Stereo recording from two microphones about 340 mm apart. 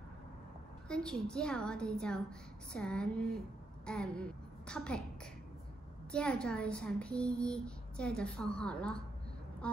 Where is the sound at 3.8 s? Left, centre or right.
Centre.